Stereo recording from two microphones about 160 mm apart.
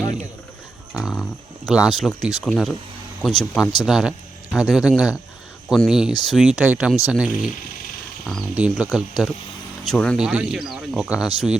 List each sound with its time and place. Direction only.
0.9 s speech: centre (ahead or behind)
3.6 s speech: 25° left (ahead or behind)
3.8 s speech: 5° right (ahead or behind)
8.5 s speech: 10° right (ahead or behind)
10.2 s speech: 5° right (ahead or behind)